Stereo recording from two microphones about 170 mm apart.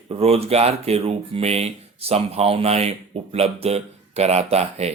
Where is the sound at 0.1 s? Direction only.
35° right (ahead or behind).